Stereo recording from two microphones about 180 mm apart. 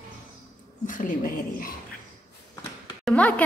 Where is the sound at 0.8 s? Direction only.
50° left (ahead or behind).